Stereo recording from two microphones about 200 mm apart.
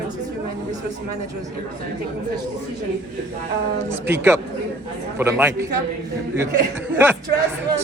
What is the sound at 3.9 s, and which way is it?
A man's voice, 10° right (ahead or behind).